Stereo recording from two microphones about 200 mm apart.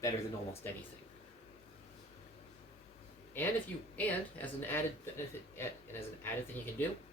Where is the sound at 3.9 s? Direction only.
10° left (ahead or behind).